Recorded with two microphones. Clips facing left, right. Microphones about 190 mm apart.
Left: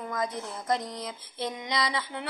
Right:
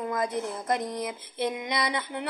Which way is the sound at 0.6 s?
55° right (ahead or behind).